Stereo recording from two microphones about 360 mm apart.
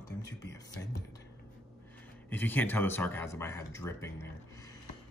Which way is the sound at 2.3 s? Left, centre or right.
Centre.